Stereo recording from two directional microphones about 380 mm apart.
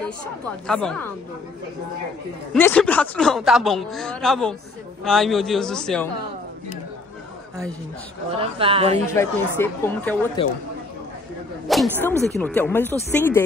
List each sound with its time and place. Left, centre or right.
0.7 s speech: centre
2.5 s speech: centre
8.4 s a woman's voice: centre
9.0 s speech: centre
11.6 s speech: centre